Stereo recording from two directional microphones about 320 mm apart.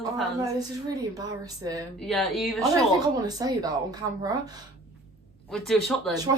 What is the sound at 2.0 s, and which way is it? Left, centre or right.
Speech, centre.